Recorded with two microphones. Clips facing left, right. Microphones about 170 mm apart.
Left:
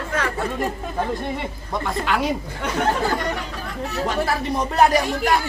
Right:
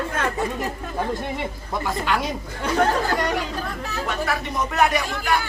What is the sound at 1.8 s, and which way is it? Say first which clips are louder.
Speech: even; centre (ahead or behind).